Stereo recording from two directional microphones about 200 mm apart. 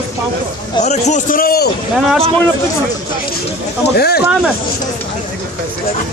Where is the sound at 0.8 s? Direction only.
35° left (ahead or behind).